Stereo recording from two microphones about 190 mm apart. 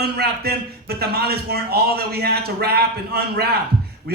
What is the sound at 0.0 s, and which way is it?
A man's voice, 55° right (ahead or behind).